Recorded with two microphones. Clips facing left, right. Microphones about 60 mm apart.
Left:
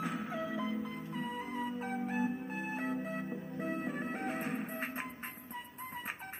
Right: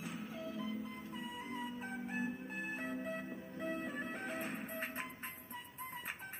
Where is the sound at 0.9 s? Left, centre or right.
Left.